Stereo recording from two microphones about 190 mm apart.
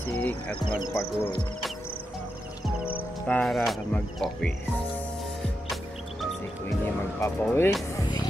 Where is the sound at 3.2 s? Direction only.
5° left (ahead or behind).